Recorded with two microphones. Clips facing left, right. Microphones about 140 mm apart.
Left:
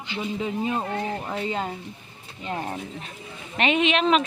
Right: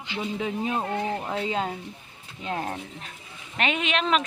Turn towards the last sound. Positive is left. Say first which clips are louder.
# left 4 dB
turn(degrees=0)  # may be behind; listen again after turning